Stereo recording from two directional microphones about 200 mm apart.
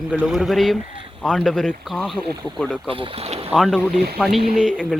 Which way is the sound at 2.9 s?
30° right (ahead or behind).